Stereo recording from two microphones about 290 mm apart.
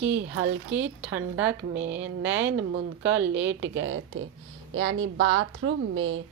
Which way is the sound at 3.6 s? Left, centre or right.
Right.